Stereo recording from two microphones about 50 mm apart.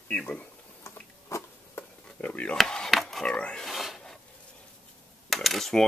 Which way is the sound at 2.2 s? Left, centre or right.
Left.